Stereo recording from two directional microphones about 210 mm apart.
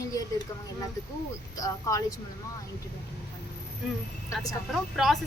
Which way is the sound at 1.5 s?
15° left (ahead or behind).